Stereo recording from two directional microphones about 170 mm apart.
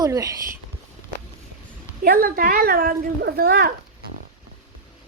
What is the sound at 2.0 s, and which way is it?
Speech, 55° right (ahead or behind).